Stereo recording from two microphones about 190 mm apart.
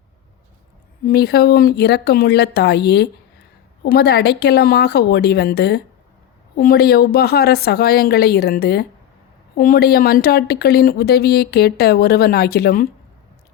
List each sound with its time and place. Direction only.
1.0 s a woman's voice: 55° left (ahead or behind)